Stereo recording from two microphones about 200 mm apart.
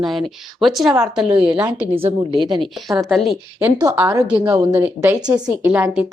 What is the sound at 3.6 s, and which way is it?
A woman's voice, 15° right (ahead or behind).